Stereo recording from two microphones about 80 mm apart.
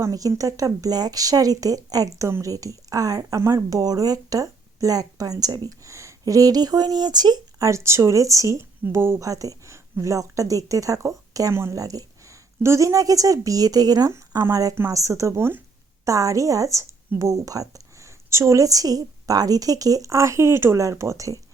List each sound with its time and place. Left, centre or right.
0.0 s speech: right
5.8 s speech: right
7.9 s speech: right
8.8 s speech: right
9.2 s speech: right
11.7 s a sound: right
12.6 s speech: right
14.1 s speech: right
16.0 s speech: right